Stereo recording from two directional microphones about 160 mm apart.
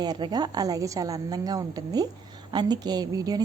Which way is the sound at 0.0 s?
25° right (ahead or behind).